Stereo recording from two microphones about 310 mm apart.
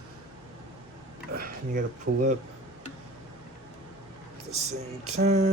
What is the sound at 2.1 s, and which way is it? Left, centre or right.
Speech, right.